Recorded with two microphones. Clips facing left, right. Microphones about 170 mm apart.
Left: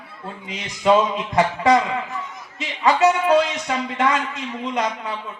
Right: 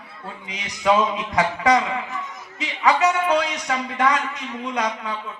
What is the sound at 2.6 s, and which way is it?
A man's voice, 25° left (ahead or behind).